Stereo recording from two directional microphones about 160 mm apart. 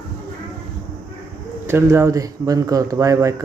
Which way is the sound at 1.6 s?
15° right (ahead or behind).